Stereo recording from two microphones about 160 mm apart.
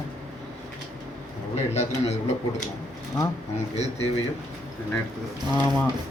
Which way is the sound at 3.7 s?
45° left (ahead or behind).